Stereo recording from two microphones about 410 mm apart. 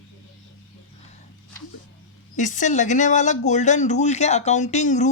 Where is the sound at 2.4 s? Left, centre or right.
Centre.